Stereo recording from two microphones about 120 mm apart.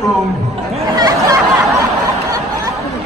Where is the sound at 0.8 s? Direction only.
35° right (ahead or behind).